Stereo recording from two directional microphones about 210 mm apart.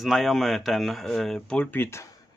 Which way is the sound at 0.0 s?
Centre (ahead or behind).